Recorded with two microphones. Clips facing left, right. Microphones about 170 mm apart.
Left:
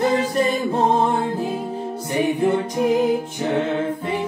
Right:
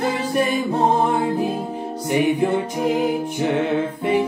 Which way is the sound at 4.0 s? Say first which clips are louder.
Right 5 dB; 15° right (ahead or behind).